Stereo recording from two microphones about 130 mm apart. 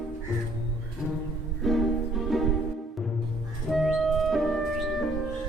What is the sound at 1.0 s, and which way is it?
Music, centre (ahead or behind).